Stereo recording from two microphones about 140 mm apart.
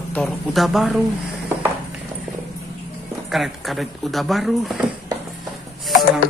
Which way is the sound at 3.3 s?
Centre (ahead or behind).